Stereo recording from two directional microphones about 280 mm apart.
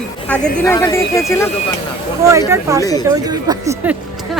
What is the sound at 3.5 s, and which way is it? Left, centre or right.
Speech, centre.